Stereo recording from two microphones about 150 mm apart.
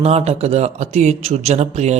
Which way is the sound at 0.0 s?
45° right (ahead or behind).